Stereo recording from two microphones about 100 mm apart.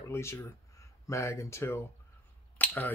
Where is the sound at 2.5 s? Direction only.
20° left (ahead or behind).